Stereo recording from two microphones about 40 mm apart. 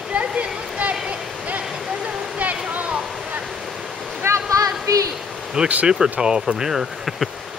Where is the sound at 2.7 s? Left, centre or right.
Right.